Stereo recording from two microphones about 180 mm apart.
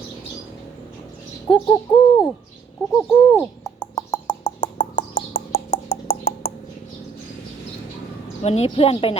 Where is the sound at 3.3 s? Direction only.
20° left (ahead or behind).